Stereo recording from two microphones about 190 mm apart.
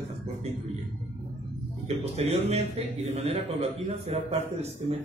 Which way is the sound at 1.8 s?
35° right (ahead or behind).